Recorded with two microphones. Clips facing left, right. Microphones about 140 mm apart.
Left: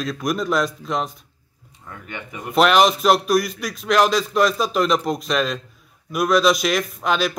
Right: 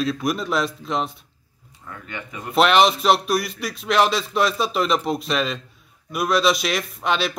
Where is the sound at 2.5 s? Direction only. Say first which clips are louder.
Left 1 dB; centre (ahead or behind).